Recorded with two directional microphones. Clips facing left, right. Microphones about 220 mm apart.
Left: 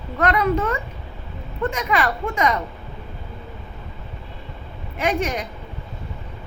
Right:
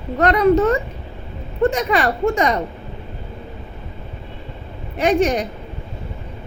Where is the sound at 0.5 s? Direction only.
45° right (ahead or behind).